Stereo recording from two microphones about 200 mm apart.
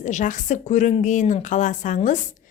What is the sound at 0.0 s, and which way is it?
A woman's voice, 40° left (ahead or behind).